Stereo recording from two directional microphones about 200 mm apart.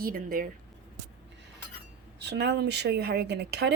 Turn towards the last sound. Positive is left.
turn(degrees=-55)  # may be behind; listen again after turning